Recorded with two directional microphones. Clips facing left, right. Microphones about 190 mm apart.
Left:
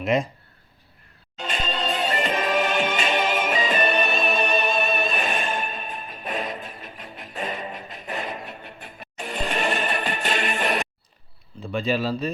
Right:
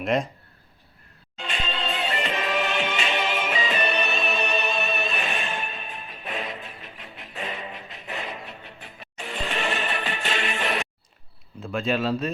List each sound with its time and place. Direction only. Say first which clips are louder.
0.0 s speech: left 2 dB; centre (ahead or behind)
1.4 s music: left 3 dB; 40° left (ahead or behind)
11.6 s speech: left 1 dB; centre (ahead or behind)